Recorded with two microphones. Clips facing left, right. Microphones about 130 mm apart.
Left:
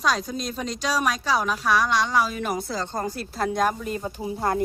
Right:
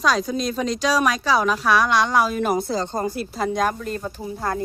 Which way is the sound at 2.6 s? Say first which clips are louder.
Right 5 dB; 25° right (ahead or behind).